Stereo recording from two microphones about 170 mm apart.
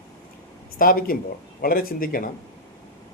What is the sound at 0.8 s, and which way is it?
A man's voice, 55° left (ahead or behind).